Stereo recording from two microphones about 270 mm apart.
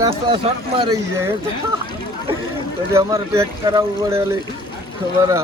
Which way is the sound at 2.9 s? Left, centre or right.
Centre.